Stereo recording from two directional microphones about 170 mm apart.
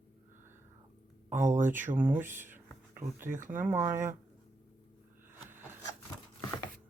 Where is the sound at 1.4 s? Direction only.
45° right (ahead or behind).